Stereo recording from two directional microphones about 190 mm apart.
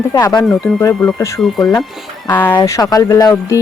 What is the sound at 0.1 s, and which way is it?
Speech, 20° left (ahead or behind).